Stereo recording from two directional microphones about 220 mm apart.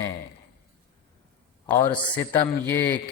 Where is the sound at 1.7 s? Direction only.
10° left (ahead or behind).